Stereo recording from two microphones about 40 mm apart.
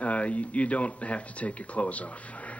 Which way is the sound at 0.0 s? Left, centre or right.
Left.